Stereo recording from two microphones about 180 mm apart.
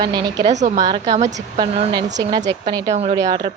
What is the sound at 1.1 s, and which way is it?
Speech, 35° right (ahead or behind).